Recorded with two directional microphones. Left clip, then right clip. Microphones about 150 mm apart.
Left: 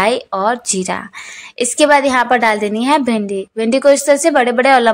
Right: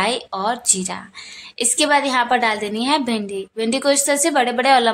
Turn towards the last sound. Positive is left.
turn(degrees=30)  # may be behind; listen again after turning